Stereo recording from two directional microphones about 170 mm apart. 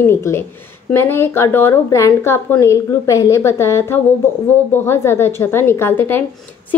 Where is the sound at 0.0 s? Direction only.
15° left (ahead or behind).